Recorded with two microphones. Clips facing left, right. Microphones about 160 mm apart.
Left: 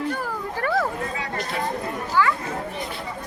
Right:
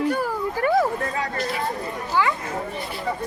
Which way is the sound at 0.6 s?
15° right (ahead or behind).